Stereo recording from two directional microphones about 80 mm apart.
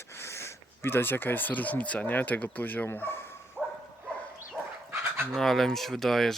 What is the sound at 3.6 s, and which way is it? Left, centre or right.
Dog, centre.